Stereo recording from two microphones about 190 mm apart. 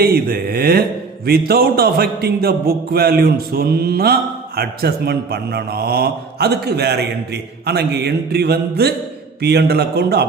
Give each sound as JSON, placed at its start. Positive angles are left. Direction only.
{"t": 0.0, "sound": "speech", "side_deg": -50}